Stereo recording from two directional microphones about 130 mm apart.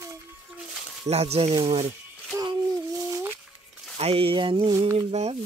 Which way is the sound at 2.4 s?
25° right (ahead or behind).